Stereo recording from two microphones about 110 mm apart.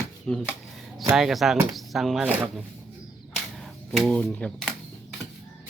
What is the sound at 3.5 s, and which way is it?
Typewriter, centre (ahead or behind).